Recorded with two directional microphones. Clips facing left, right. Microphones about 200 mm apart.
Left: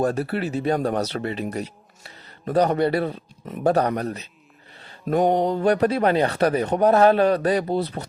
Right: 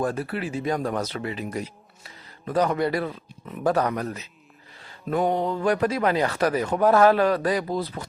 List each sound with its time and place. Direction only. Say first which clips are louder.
0.0 s chopping: left 4 dB; 35° left (ahead or behind)
6.8 s speech: left 1 dB; 20° left (ahead or behind)